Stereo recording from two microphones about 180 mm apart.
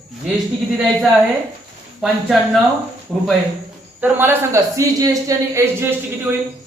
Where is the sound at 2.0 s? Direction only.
Centre (ahead or behind).